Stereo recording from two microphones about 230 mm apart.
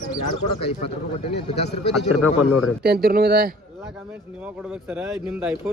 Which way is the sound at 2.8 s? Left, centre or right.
Right.